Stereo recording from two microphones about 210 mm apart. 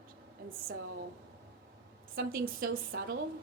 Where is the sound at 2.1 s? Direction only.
45° right (ahead or behind).